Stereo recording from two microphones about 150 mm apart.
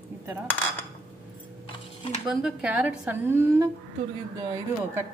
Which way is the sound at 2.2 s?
5° right (ahead or behind).